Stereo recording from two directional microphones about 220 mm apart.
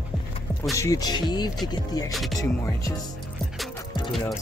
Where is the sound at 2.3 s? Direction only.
15° left (ahead or behind).